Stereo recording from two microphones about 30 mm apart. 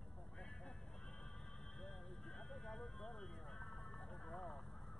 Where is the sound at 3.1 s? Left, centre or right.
Centre.